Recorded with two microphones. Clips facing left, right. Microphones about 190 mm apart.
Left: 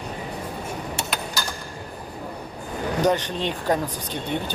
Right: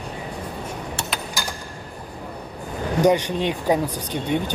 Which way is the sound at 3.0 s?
10° right (ahead or behind).